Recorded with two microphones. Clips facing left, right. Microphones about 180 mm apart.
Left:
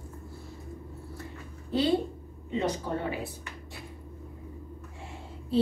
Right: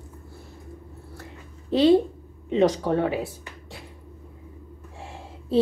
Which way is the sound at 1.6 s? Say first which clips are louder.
Right 9 dB; 90° right.